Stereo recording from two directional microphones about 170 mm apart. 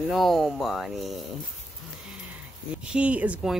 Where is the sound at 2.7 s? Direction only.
5° right (ahead or behind).